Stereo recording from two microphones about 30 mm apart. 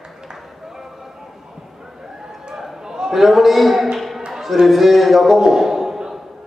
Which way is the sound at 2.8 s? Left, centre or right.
Centre.